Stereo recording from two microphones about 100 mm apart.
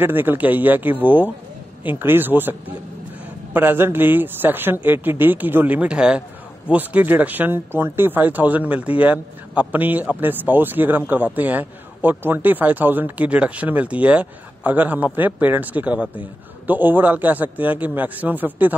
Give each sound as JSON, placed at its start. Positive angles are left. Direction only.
{"t": 0.0, "sound": "speech", "side_deg": -20}
{"t": 3.5, "sound": "speech", "side_deg": -20}